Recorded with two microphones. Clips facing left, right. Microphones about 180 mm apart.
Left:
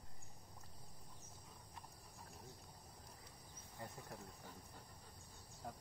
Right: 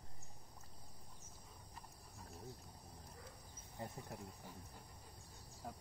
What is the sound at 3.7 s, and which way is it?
Cricket, 25° right (ahead or behind).